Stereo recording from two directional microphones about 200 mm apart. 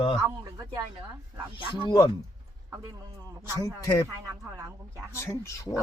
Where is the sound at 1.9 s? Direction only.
20° left (ahead or behind).